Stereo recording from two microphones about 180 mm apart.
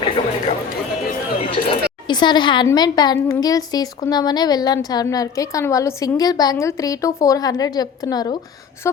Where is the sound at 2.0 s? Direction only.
25° left (ahead or behind).